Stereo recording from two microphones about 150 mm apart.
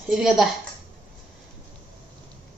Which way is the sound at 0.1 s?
Centre (ahead or behind).